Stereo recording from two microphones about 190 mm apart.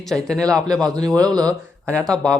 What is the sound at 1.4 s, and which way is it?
Speech, 5° left (ahead or behind).